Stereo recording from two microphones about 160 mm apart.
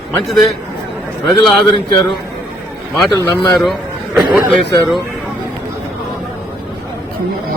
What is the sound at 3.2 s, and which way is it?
Speech, 25° left (ahead or behind).